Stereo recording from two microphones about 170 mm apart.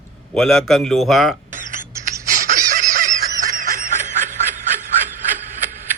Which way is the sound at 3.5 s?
50° right (ahead or behind).